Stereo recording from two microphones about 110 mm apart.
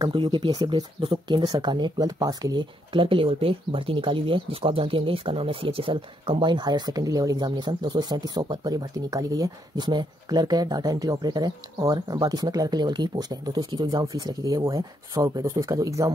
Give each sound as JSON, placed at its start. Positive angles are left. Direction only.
{"t": 0.0, "sound": "speech", "side_deg": -45}
{"t": 14.0, "sound": "speech", "side_deg": -30}